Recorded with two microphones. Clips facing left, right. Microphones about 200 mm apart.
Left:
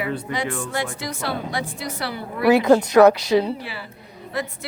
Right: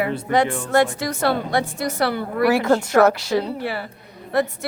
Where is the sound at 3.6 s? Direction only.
55° right (ahead or behind).